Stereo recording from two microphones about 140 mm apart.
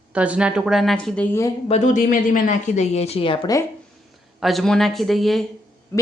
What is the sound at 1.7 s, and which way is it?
Speech, 60° left (ahead or behind).